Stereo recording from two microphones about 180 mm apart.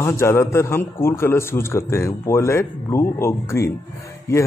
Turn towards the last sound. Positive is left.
turn(degrees=15)  # may be behind; listen again after turning